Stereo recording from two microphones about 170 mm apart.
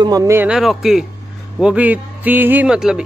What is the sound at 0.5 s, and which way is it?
A man's voice, centre (ahead or behind).